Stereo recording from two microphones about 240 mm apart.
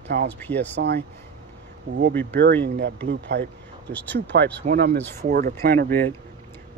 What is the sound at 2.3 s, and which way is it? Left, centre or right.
Speech, right.